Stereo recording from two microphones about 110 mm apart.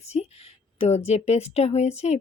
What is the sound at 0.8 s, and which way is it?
Speech, 75° left (ahead or behind).